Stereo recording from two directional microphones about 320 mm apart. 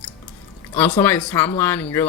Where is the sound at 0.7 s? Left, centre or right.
Centre.